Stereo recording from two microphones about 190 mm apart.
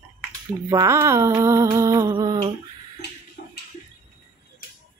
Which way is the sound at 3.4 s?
50° left (ahead or behind).